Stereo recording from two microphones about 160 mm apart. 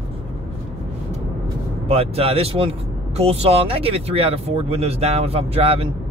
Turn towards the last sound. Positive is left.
turn(degrees=-35)  # may be behind; listen again after turning